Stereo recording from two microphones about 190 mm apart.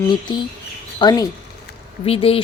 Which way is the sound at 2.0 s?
30° left (ahead or behind).